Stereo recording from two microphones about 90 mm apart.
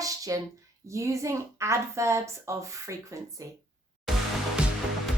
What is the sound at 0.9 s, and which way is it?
A woman's voice, 35° right (ahead or behind).